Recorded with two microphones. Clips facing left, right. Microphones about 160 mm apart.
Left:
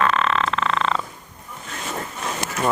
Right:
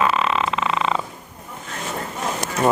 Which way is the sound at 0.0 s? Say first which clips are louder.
Even; 5° right (ahead or behind).